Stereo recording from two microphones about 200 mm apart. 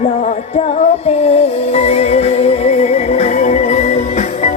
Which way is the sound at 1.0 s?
30° left (ahead or behind).